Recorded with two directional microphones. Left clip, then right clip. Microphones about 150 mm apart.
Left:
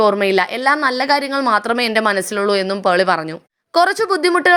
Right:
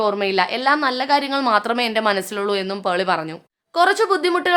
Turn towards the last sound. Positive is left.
turn(degrees=35)  # may be behind; listen again after turning